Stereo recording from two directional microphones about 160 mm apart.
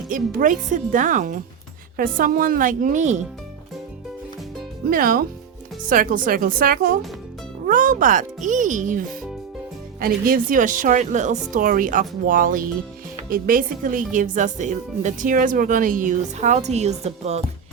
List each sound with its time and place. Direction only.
0.1 s speech: 60° right (ahead or behind)
4.9 s a woman's voice: 65° right (ahead or behind); by 17.4 s 40° right (ahead or behind)